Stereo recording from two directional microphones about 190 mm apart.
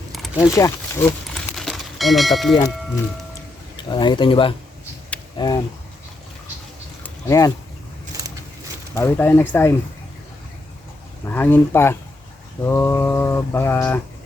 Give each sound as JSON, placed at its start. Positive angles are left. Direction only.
{"t": 0.3, "sound": "speech", "side_deg": 15}
{"t": 1.5, "sound": "a sound", "side_deg": 0}
{"t": 3.8, "sound": "speech", "side_deg": 25}
{"t": 7.0, "sound": "a sound", "side_deg": 15}
{"t": 9.0, "sound": "mantra", "side_deg": 10}
{"t": 11.3, "sound": "mantra", "side_deg": 10}